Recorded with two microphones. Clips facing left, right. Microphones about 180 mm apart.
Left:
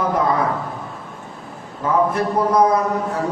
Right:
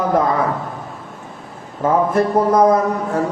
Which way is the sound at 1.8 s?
50° right (ahead or behind).